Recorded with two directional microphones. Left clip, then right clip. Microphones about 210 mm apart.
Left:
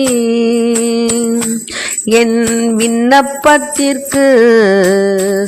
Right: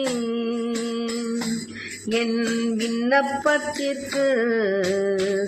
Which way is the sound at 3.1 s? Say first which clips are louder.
Left 11 dB; 45° left (ahead or behind).